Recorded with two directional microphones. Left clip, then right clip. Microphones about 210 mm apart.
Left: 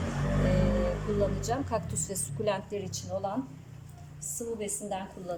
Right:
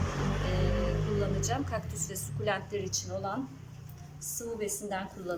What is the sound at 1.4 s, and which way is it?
A woman's voice, 20° left (ahead or behind).